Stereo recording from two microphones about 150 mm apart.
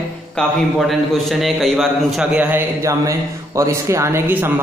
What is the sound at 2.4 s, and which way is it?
A man's voice, 15° right (ahead or behind).